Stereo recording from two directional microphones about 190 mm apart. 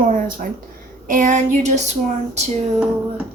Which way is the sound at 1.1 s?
45° right (ahead or behind).